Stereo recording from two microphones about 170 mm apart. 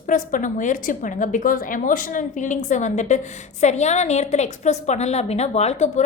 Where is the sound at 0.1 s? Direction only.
50° left (ahead or behind).